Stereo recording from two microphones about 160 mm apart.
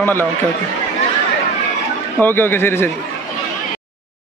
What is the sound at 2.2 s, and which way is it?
Speech, 15° left (ahead or behind).